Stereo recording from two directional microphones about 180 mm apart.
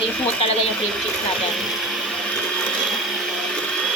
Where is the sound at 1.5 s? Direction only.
Centre (ahead or behind).